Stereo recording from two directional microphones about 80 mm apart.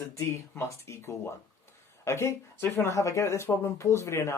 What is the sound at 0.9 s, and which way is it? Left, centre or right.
Speech, left.